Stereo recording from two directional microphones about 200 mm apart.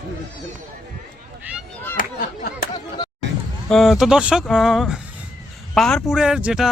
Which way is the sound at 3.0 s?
20° left (ahead or behind).